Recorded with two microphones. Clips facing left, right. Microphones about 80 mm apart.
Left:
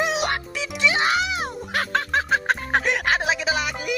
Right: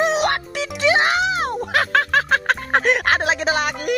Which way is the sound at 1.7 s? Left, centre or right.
Right.